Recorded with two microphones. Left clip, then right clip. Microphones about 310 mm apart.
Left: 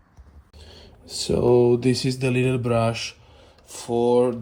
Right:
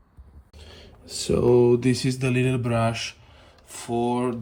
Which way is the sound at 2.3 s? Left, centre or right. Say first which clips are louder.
Left 3 dB; right.